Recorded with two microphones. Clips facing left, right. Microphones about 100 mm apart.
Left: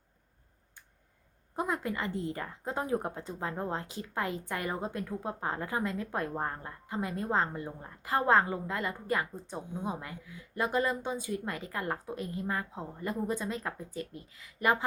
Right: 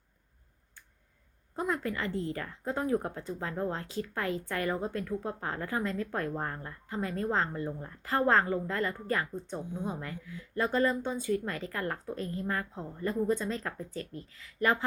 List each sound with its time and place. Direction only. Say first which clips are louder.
1.5 s speech: even; 15° left (ahead or behind)